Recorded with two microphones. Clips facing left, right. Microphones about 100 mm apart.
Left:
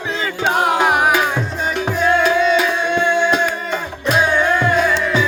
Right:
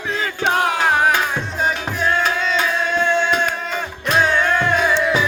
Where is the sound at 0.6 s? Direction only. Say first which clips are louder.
Left 3 dB; 15° left (ahead or behind).